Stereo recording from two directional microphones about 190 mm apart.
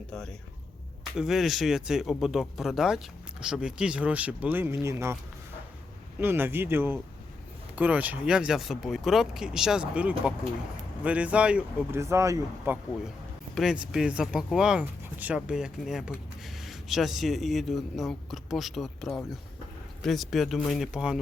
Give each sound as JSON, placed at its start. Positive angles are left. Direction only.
{"t": 0.1, "sound": "speech", "side_deg": 5}
{"t": 6.1, "sound": "speech", "side_deg": -10}